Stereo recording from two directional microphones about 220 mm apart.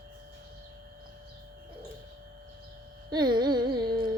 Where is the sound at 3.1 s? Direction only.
20° right (ahead or behind).